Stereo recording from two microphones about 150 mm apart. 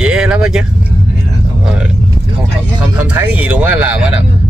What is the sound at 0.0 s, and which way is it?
Vehicle, 5° right (ahead or behind).